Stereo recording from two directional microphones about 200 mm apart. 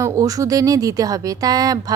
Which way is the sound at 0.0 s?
15° right (ahead or behind).